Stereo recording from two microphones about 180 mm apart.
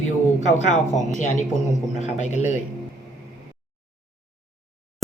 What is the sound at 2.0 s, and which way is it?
Speech, 40° left (ahead or behind).